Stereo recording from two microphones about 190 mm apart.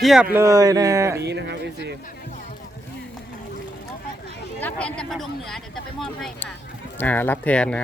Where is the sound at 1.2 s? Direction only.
65° right (ahead or behind).